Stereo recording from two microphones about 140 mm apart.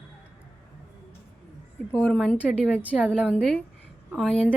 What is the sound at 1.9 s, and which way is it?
Speech, 10° left (ahead or behind).